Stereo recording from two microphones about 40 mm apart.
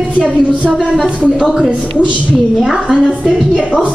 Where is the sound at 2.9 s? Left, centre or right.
Right.